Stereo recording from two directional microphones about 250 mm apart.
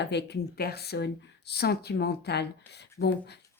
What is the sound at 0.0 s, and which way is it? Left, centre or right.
Speech, left.